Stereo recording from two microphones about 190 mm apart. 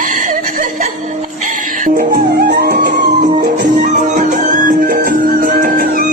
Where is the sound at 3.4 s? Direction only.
40° right (ahead or behind).